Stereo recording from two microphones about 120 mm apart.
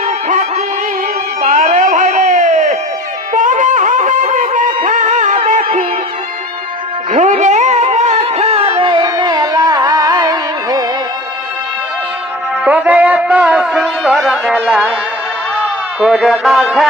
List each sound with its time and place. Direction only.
1.4 s a sound: 90° right
3.3 s music: 90° right
7.2 s music: 80° right; by 10.8 s 30° right (ahead or behind)
12.6 s music: 10° right (ahead or behind)
15.6 s a man's voice: 5° right (ahead or behind)